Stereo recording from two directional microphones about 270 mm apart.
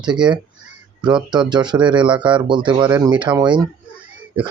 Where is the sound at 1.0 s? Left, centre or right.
Centre.